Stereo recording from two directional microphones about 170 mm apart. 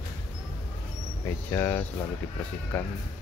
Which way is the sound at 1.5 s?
15° left (ahead or behind).